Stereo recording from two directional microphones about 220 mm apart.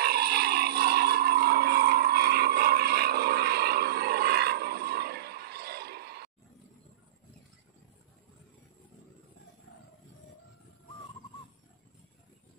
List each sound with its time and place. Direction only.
0.0 s vehicle: 45° right (ahead or behind)